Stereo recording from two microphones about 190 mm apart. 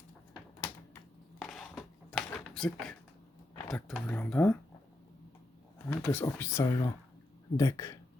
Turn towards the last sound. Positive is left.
turn(degrees=15)  # may be behind; listen again after turning